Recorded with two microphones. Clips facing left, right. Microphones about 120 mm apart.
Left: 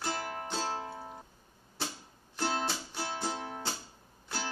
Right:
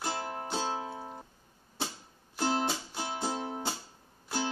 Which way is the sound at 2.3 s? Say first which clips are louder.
Right 3 dB; 15° right (ahead or behind).